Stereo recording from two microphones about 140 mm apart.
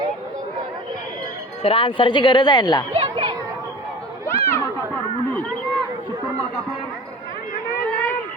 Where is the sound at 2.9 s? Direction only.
40° right (ahead or behind).